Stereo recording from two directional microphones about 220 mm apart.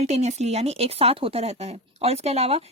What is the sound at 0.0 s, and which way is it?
Speech, 30° right (ahead or behind).